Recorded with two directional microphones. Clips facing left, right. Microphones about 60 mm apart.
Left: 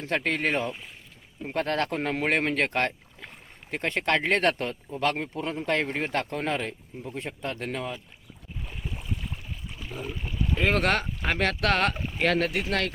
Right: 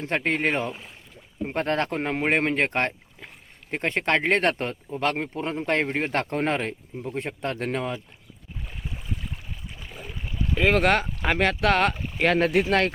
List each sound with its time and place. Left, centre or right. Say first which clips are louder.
0.0 s speech: right 2 dB; right
10.6 s speech: right 4 dB; centre
12.4 s speech: right 6 dB; right